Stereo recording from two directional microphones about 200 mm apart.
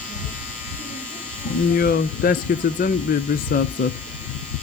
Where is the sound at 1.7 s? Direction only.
45° left (ahead or behind).